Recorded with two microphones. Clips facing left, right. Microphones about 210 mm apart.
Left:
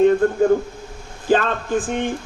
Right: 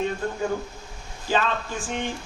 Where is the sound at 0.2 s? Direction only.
55° left (ahead or behind).